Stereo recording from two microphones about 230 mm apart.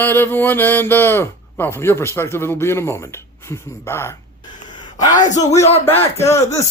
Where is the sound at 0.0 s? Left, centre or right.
Centre.